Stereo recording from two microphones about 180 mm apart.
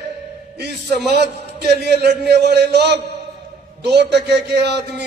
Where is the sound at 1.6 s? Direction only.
65° right (ahead or behind).